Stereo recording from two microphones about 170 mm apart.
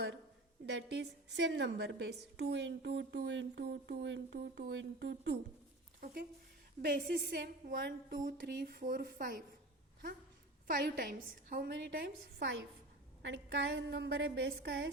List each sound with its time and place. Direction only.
0.6 s a woman's voice: 90° right
6.8 s a woman's voice: 60° right (ahead or behind)
10.7 s a woman's voice: 55° right (ahead or behind); by 14.8 s 90° right